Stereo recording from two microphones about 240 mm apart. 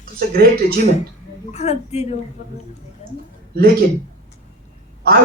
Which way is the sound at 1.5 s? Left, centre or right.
Left.